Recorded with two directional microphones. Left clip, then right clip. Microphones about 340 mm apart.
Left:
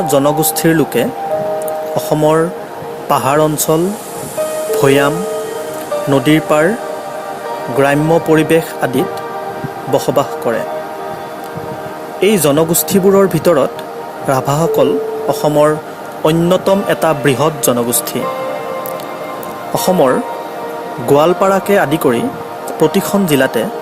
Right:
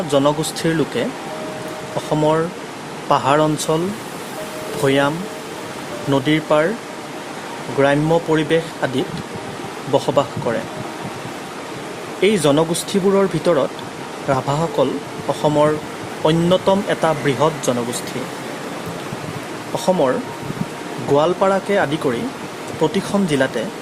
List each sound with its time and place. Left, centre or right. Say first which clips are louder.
0.1 s speech: left 3 dB; centre
2.0 s speech: left 5 dB; centre
4.8 s speech: left 5 dB; centre
7.8 s speech: left 4 dB; centre
12.2 s speech: left 4 dB; centre
19.7 s speech: left 6 dB; centre